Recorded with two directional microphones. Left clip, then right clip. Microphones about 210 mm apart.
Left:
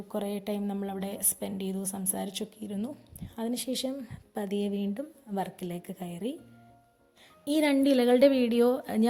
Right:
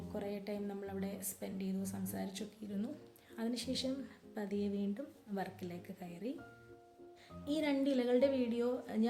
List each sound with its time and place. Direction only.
0.1 s speech: 40° left (ahead or behind)
7.4 s a woman's voice: 40° left (ahead or behind)